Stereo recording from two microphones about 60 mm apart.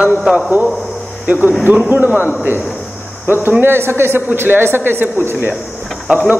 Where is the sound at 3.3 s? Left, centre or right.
Right.